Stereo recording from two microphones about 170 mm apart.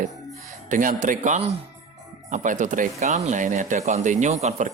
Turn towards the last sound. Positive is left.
turn(degrees=-40)  # may be behind; listen again after turning